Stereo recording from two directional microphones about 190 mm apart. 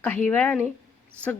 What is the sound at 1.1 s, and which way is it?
Speech, 10° right (ahead or behind).